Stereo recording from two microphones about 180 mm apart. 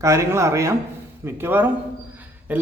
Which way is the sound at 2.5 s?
10° right (ahead or behind).